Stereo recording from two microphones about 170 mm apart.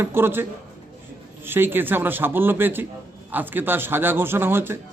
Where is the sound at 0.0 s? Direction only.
15° right (ahead or behind).